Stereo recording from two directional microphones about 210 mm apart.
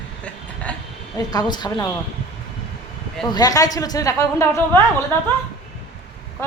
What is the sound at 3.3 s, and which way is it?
A woman's voice, 15° left (ahead or behind).